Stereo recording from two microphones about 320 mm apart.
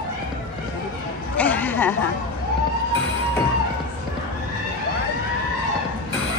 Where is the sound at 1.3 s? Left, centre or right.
Centre.